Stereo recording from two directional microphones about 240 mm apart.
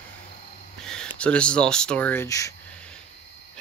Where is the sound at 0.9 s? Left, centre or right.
Centre.